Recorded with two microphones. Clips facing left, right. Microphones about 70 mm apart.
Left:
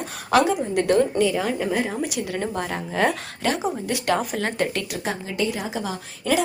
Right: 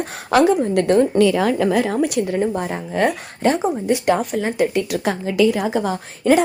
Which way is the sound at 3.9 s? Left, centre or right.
Right.